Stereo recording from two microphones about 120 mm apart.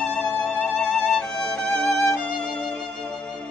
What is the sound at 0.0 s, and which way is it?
Music, 10° left (ahead or behind).